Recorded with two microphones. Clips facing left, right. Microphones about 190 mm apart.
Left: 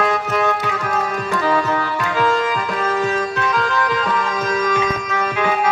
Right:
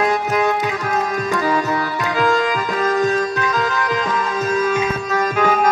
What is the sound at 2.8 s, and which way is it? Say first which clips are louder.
Music: right 4 dB; 40° right (ahead or behind).